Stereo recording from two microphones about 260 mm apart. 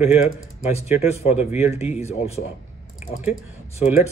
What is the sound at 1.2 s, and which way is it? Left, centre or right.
Speech, centre.